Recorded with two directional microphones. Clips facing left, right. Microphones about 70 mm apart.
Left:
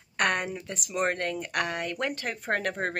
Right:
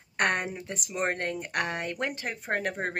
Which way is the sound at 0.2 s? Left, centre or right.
Right.